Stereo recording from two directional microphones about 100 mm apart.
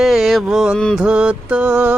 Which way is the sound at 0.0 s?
Centre (ahead or behind).